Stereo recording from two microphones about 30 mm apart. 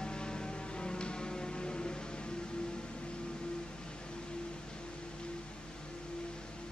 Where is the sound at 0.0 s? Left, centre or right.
Left.